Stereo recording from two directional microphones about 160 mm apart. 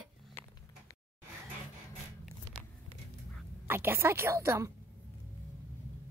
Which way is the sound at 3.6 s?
15° right (ahead or behind).